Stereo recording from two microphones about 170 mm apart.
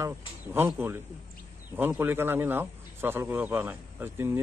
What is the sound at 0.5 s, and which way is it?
Speech, 15° right (ahead or behind).